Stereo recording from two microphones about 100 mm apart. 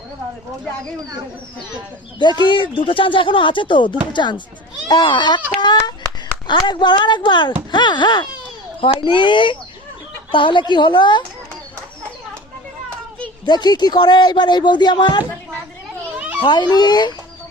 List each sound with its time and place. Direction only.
2.4 s speech: 55° left (ahead or behind)
8.8 s speech: 60° left (ahead or behind)
13.4 s speech: 45° left (ahead or behind)
16.1 s children playing: 15° right (ahead or behind)
16.4 s speech: 50° left (ahead or behind)